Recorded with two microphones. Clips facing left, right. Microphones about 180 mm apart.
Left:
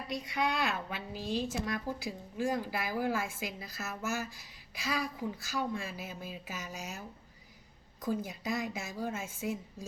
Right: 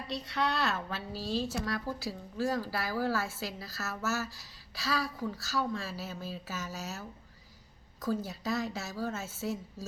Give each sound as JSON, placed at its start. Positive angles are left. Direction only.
{"t": 0.1, "sound": "a woman's voice", "side_deg": 10}
{"t": 8.0, "sound": "a woman's voice", "side_deg": 15}